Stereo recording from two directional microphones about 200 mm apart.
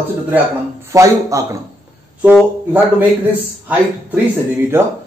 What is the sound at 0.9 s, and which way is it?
A man's voice, 15° right (ahead or behind).